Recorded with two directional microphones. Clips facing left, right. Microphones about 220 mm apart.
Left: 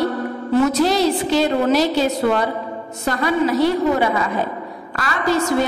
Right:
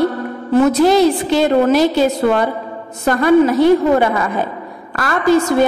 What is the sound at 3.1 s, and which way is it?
Speech, 50° right (ahead or behind).